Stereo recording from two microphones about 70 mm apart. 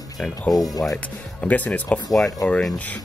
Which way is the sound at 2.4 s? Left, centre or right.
Left.